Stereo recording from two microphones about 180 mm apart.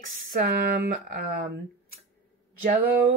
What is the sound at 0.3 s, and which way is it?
Speech, 60° right (ahead or behind).